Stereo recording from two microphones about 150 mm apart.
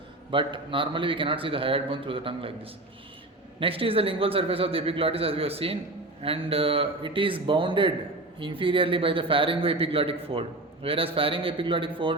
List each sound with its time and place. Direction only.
0.3 s a man's voice: 35° right (ahead or behind)
3.6 s a man's voice: 35° right (ahead or behind)